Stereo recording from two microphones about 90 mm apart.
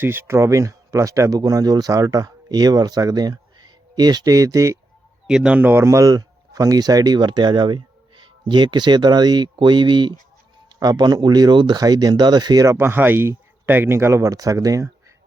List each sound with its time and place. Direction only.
0.0 s speech: 25° right (ahead or behind)
5.3 s speech: 10° right (ahead or behind)
5.8 s speech: 40° right (ahead or behind); by 10.2 s 60° right (ahead or behind)
10.8 s speech: 50° right (ahead or behind)
12.6 s speech: 30° right (ahead or behind)